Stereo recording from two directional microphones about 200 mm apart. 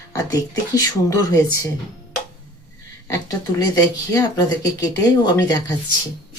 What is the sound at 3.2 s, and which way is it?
Speech, 20° left (ahead or behind).